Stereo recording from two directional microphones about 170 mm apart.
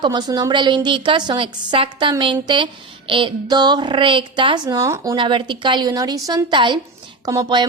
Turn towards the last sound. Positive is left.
turn(degrees=-25)  # may be behind; listen again after turning